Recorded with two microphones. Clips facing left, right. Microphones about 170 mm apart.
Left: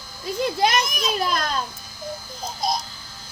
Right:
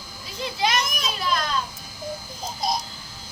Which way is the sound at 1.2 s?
45° left (ahead or behind).